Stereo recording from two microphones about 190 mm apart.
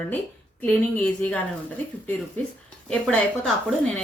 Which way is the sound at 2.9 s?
5° left (ahead or behind).